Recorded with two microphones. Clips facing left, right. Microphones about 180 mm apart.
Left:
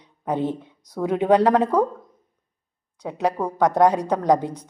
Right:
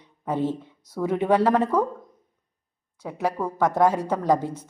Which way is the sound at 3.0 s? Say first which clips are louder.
Left 3 dB; 20° left (ahead or behind).